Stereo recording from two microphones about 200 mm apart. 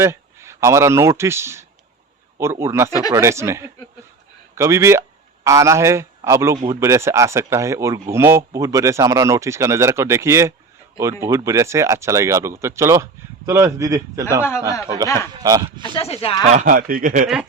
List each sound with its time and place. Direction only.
0.0 s speech: 15° right (ahead or behind)
14.7 s speech: 15° left (ahead or behind)
15.4 s speech: 20° right (ahead or behind)
15.8 s speech: 30° left (ahead or behind)
16.5 s a man's voice: 40° right (ahead or behind)